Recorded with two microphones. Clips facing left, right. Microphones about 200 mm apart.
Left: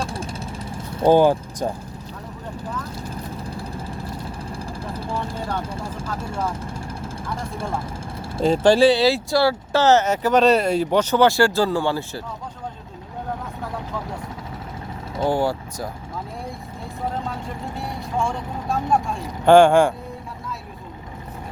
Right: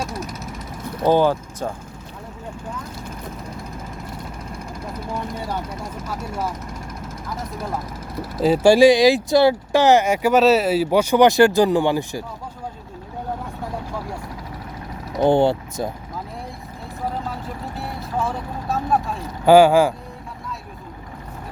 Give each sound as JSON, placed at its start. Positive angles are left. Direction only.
{"t": 0.0, "sound": "vehicle", "side_deg": 30}
{"t": 1.1, "sound": "speech", "side_deg": 15}
{"t": 2.6, "sound": "vehicle", "side_deg": 30}
{"t": 5.6, "sound": "speech", "side_deg": 30}
{"t": 6.6, "sound": "vehicle", "side_deg": 30}
{"t": 8.4, "sound": "speech", "side_deg": -10}
{"t": 15.2, "sound": "speech", "side_deg": -25}
{"t": 17.2, "sound": "speech", "side_deg": -5}